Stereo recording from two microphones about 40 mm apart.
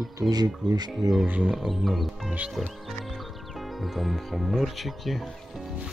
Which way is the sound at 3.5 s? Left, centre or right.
Centre.